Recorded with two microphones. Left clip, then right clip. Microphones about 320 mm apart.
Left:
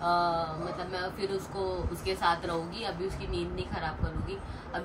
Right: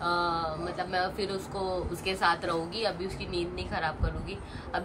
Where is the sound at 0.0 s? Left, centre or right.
Centre.